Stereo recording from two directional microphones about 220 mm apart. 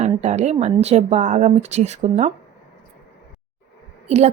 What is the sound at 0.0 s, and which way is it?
A woman's voice, 30° right (ahead or behind).